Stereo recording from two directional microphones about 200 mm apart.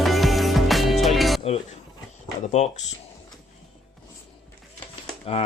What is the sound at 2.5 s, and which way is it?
Speech, 35° left (ahead or behind).